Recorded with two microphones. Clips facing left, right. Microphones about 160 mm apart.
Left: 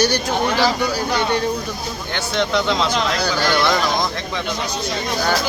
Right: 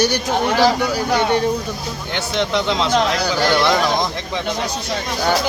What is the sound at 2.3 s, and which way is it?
Speech, 20° right (ahead or behind).